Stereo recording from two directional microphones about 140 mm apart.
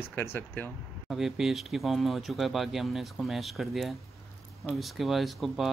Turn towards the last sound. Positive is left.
turn(degrees=0)  # may be behind; listen again after turning